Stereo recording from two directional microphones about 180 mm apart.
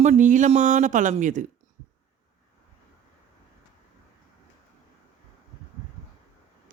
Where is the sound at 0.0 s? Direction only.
40° right (ahead or behind).